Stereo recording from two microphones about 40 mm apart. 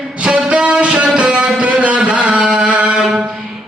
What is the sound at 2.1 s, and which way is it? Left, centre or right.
Chant, right.